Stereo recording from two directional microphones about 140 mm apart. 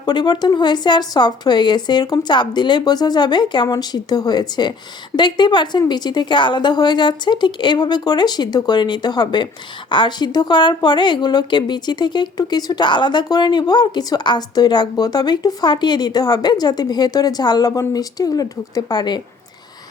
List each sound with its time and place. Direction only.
0.0 s a woman's voice: 30° left (ahead or behind)